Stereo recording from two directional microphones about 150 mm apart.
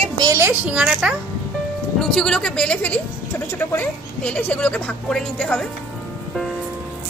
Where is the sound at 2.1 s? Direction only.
5° left (ahead or behind).